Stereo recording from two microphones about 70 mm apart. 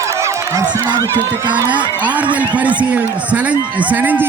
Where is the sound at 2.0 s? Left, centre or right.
Right.